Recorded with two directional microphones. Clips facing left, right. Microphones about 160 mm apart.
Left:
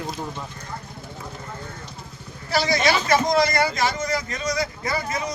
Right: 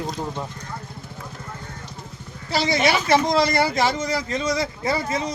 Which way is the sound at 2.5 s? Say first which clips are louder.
Even; 25° right (ahead or behind).